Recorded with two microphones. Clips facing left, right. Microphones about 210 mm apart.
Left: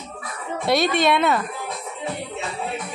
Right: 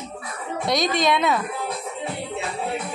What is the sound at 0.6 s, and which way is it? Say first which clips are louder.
Speech: left 2 dB; 5° left (ahead or behind).